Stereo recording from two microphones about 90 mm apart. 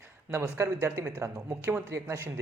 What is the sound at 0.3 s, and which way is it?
A man's voice, 30° right (ahead or behind).